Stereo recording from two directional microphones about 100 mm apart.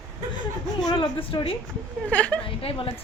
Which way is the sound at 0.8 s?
55° left (ahead or behind).